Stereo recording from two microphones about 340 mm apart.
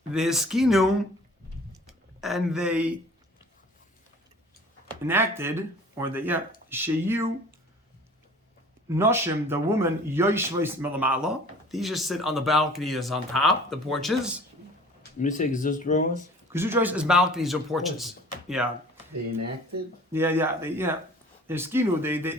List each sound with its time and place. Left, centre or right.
0.1 s speech: centre
1.7 s a sound: centre
5.0 s speech: centre
8.9 s speech: centre
15.2 s speech: left
16.5 s speech: centre
20.1 s speech: centre